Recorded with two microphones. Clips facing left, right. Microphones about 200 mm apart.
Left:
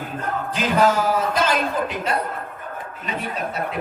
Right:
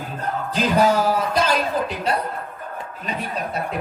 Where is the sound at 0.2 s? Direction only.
35° right (ahead or behind).